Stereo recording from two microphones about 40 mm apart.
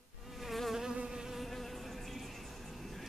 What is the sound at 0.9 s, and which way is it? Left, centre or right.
Insect, centre.